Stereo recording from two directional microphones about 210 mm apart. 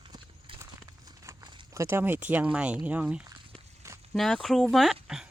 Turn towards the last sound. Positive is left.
turn(degrees=0)  # may be behind; listen again after turning